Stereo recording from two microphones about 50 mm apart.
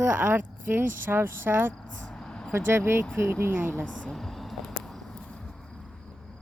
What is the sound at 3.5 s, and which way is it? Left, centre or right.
Speech, right.